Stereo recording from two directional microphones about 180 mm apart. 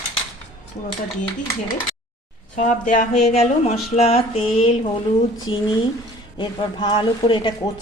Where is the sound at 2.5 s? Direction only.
45° left (ahead or behind).